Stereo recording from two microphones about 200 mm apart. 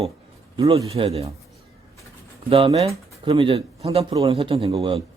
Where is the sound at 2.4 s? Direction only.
25° right (ahead or behind).